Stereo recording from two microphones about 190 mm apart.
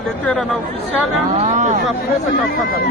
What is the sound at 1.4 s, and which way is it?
Speech, 35° right (ahead or behind).